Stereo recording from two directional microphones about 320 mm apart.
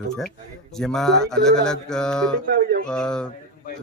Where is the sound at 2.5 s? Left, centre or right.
Right.